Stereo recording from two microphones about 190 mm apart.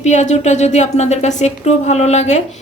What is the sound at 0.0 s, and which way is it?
Speech, 40° left (ahead or behind).